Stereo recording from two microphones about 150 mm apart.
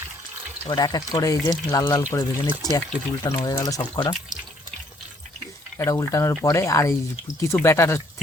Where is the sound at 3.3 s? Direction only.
20° left (ahead or behind).